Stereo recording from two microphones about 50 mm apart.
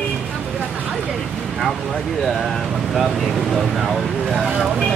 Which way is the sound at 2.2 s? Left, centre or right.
Centre.